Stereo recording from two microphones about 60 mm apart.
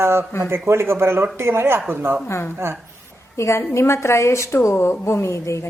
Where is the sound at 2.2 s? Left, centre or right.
Left.